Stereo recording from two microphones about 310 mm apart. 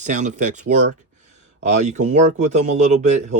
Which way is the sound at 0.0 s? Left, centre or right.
Right.